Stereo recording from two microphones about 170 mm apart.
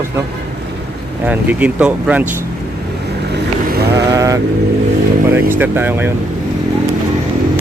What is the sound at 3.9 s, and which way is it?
Sheep, 20° right (ahead or behind).